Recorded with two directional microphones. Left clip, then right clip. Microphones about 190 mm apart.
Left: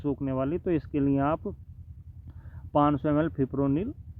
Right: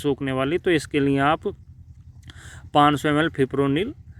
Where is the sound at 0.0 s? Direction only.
20° right (ahead or behind).